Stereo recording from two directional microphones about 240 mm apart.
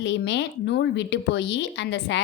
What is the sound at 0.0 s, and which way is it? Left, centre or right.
A woman's voice, left.